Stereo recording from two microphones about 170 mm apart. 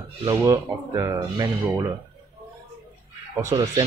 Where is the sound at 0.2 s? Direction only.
20° right (ahead or behind).